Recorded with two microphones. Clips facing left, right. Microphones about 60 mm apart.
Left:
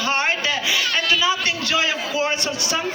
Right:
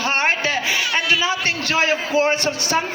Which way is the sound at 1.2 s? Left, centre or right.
Right.